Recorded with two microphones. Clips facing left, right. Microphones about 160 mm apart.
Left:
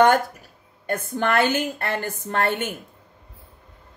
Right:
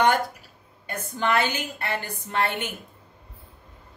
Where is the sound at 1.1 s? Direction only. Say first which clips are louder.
Left 3 dB; 55° left (ahead or behind).